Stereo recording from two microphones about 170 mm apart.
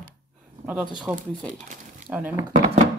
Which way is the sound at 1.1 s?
Centre (ahead or behind).